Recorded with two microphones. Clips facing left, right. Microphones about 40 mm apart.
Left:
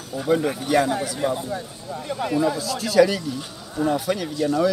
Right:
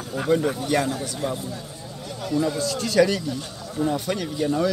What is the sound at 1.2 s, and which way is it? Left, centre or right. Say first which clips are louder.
Speech: left 4 dB; left.